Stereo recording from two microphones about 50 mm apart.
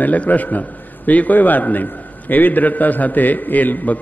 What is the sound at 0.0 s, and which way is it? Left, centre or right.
A man's voice, left.